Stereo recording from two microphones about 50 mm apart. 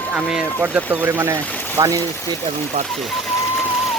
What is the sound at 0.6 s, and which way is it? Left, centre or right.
Speech, right.